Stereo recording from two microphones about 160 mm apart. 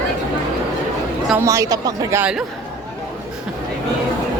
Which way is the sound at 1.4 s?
20° right (ahead or behind).